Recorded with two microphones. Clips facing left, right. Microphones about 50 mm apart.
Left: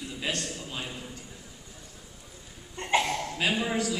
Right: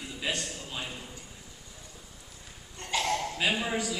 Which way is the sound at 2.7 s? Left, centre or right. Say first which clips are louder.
Left 3 dB; left.